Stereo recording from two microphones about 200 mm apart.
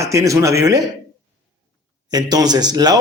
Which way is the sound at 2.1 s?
20° right (ahead or behind).